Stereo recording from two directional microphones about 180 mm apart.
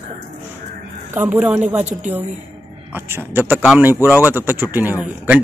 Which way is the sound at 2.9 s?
10° right (ahead or behind).